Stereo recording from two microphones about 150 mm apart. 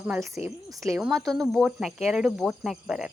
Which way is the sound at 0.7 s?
20° right (ahead or behind).